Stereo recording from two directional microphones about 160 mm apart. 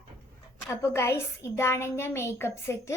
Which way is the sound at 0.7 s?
15° left (ahead or behind).